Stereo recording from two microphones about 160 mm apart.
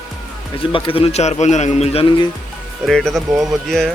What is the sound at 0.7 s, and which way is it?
A man's voice, 35° left (ahead or behind).